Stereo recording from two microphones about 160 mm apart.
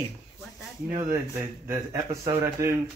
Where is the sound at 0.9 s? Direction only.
15° right (ahead or behind).